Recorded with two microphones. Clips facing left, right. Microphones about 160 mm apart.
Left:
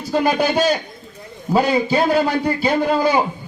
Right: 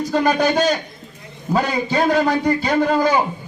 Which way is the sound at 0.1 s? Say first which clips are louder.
Left 1 dB; 10° left (ahead or behind).